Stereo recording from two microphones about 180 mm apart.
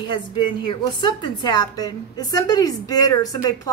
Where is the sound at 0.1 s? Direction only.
25° left (ahead or behind).